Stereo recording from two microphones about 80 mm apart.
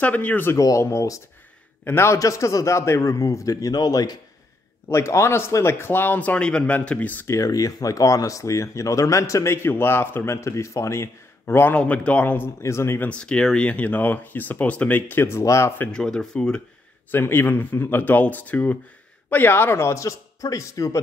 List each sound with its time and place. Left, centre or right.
0.0 s speech: centre
0.6 s a man's voice: left
2.1 s a man's voice: left
4.8 s speech: left; by 7.2 s centre
7.2 s speech: left; by 12.4 s centre
12.6 s speech: left
13.1 s speech: centre; by 15.7 s left
15.9 s speech: centre
17.1 s speech: left